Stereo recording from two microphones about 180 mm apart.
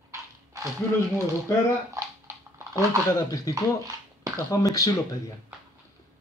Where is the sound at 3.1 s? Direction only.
20° left (ahead or behind).